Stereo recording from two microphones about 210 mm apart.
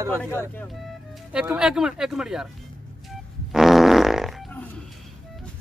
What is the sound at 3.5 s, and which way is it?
Fart, centre (ahead or behind).